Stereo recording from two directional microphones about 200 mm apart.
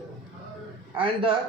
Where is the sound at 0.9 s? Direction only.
25° right (ahead or behind).